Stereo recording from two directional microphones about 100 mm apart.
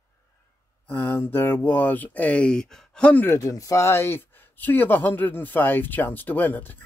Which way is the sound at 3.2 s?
30° left (ahead or behind).